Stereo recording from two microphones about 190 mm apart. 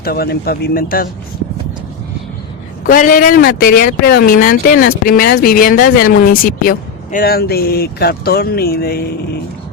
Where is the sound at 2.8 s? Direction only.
45° left (ahead or behind).